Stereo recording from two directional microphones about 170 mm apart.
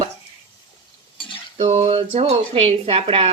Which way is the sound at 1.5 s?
40° right (ahead or behind).